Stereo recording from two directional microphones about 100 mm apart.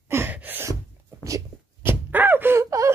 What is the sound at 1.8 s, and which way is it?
Gasp, 20° right (ahead or behind).